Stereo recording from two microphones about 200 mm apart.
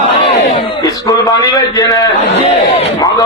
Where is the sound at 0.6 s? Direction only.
20° left (ahead or behind).